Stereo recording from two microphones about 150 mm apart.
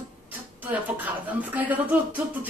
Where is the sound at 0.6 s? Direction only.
10° right (ahead or behind).